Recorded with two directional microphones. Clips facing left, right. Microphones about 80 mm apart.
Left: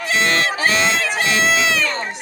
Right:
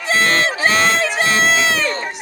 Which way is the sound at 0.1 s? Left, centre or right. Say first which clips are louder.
Right 2 dB; right.